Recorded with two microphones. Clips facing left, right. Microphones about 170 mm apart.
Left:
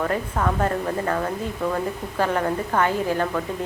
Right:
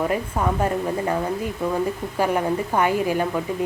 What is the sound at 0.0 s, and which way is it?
A woman's voice, 15° right (ahead or behind).